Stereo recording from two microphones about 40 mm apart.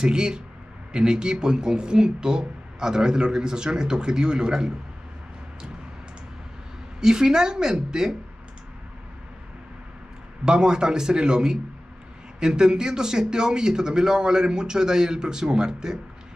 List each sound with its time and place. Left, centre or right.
0.0 s speech: centre
7.0 s a man's voice: centre
10.4 s a man's voice: right